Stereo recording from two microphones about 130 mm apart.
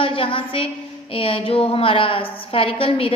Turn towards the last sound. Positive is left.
turn(degrees=45)  # may be behind; listen again after turning